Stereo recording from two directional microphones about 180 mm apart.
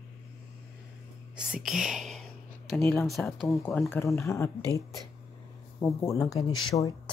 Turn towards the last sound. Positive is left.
turn(degrees=20)  # may be behind; listen again after turning